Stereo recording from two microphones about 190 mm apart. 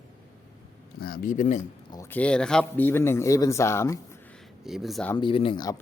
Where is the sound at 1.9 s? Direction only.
15° left (ahead or behind).